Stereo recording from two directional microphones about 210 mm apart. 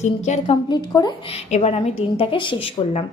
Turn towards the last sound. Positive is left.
turn(degrees=25)  # may be behind; listen again after turning